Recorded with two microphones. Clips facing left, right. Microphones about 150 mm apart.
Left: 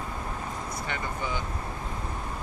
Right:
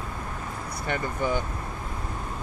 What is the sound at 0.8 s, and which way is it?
Vehicle, 50° right (ahead or behind).